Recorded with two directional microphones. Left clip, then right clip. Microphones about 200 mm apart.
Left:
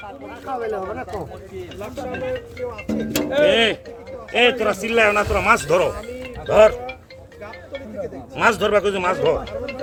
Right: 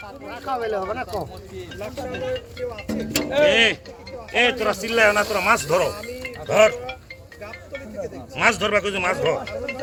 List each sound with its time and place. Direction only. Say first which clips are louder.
0.3 s speech: right 1 dB; 15° right (ahead or behind)
1.8 s speech: left 1 dB; 50° left (ahead or behind)